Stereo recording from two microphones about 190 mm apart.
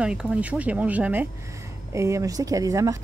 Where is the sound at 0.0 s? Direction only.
5° right (ahead or behind).